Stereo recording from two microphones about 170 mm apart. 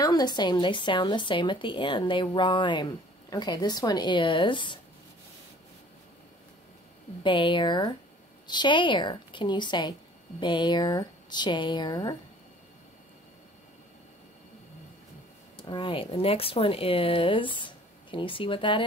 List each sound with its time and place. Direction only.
0.0 s speech: 25° left (ahead or behind)
7.2 s speech: 30° left (ahead or behind)
15.5 s speech: 30° left (ahead or behind)